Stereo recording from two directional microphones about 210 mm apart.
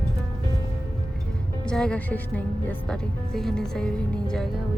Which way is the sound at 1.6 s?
5° left (ahead or behind).